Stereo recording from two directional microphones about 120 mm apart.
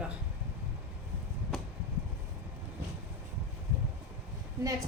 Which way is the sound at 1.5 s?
5° left (ahead or behind).